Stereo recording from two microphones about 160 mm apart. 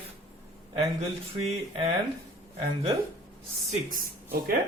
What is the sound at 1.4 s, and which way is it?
Speech, 40° right (ahead or behind).